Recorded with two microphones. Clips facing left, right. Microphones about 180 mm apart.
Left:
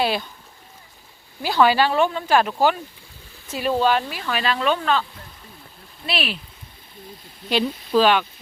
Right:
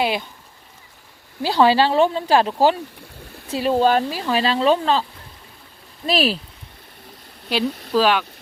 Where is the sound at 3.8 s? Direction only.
40° right (ahead or behind).